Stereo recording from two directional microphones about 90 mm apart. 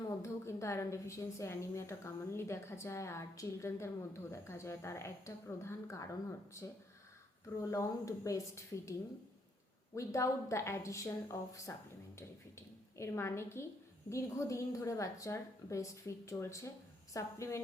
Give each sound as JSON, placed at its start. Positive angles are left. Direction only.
{"t": 0.2, "sound": "a woman's voice", "side_deg": 30}
{"t": 7.6, "sound": "a woman's voice", "side_deg": 35}
{"t": 13.0, "sound": "a woman's voice", "side_deg": 30}